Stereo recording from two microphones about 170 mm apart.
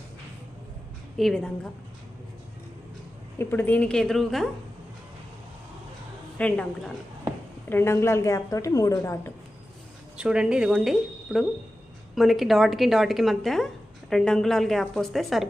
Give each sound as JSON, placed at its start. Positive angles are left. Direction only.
{"t": 1.1, "sound": "a woman's voice", "side_deg": 0}
{"t": 3.3, "sound": "a woman's voice", "side_deg": 10}
{"t": 6.3, "sound": "a woman's voice", "side_deg": 5}
{"t": 10.2, "sound": "a woman's voice", "side_deg": -5}